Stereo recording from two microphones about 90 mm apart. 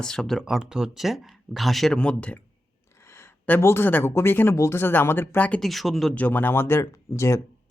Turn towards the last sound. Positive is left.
turn(degrees=30)  # may be behind; listen again after turning